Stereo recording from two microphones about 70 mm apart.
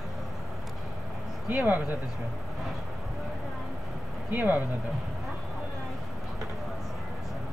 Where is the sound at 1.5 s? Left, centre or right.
Right.